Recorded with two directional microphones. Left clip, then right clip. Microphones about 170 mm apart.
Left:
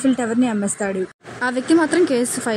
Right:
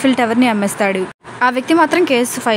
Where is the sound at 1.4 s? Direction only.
60° right (ahead or behind).